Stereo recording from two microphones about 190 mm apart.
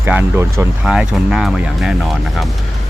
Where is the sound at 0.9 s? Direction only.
5° right (ahead or behind).